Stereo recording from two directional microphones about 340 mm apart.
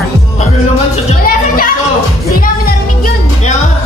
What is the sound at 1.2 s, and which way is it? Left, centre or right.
Music, left.